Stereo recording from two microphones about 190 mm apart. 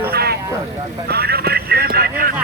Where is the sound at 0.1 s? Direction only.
55° right (ahead or behind).